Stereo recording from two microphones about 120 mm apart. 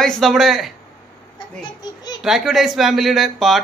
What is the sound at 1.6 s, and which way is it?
Speech, 35° left (ahead or behind).